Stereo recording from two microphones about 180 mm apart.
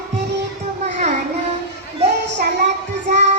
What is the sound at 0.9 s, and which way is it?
Child singing, 40° right (ahead or behind).